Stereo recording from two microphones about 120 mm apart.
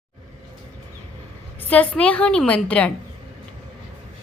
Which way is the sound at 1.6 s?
15° left (ahead or behind).